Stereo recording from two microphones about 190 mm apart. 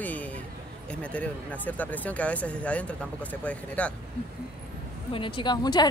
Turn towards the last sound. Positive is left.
turn(degrees=20)  # may be behind; listen again after turning